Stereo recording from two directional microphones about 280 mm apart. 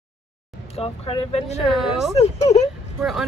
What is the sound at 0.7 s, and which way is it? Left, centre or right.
Speech, left.